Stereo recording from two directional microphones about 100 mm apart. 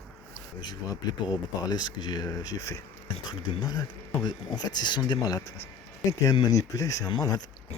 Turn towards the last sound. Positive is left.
turn(degrees=40)  # may be behind; listen again after turning